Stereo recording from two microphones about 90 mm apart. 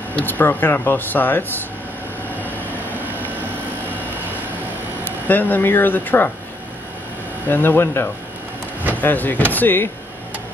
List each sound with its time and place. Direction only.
0.1 s speech: 20° left (ahead or behind)
5.0 s speech: 20° left (ahead or behind)
7.4 s speech: 25° left (ahead or behind)